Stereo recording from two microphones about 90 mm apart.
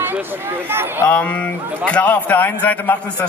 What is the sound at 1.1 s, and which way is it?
A man's voice, 15° left (ahead or behind).